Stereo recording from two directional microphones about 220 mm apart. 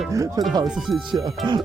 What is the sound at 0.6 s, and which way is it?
Speech, 5° right (ahead or behind).